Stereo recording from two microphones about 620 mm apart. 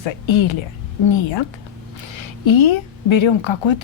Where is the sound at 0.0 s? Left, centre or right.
Left.